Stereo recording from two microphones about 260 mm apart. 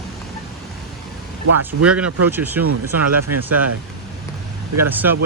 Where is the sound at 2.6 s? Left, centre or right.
Right.